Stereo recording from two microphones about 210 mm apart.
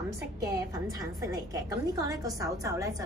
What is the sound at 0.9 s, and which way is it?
A woman's voice, 15° right (ahead or behind).